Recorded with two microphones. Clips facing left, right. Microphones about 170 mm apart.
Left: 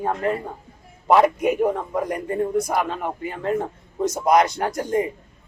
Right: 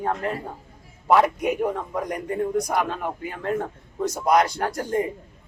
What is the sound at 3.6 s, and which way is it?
Speech, 15° left (ahead or behind).